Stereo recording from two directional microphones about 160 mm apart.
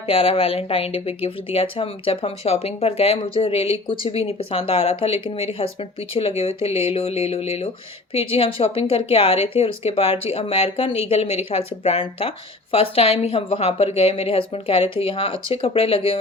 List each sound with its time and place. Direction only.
0.1 s speech: 35° left (ahead or behind)